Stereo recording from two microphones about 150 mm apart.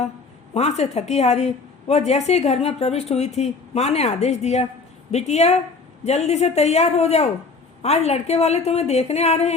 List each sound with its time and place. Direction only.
0.5 s a woman's voice: 45° left (ahead or behind)